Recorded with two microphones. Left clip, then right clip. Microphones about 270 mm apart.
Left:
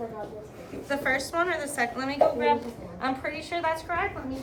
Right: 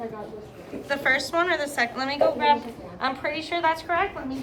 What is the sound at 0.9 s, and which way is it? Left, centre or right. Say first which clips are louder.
A woman's voice: right 4 dB; right.